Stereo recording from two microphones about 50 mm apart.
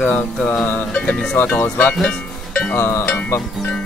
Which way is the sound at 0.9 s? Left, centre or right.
Left.